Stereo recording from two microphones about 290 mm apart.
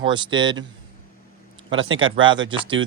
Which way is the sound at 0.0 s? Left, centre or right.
Centre.